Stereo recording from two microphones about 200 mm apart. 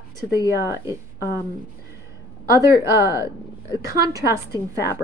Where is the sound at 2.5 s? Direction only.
15° right (ahead or behind).